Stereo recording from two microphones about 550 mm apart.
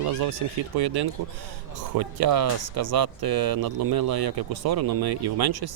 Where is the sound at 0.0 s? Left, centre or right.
Right.